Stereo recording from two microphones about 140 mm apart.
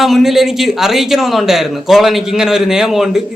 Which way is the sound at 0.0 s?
Centre (ahead or behind).